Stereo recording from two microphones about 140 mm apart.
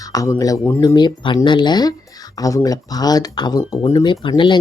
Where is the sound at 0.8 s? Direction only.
30° left (ahead or behind).